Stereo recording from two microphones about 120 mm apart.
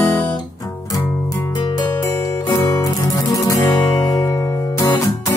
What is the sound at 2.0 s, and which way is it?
Music, 25° left (ahead or behind).